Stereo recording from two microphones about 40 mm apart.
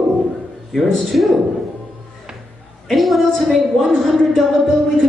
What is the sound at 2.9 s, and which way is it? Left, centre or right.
Speech, centre.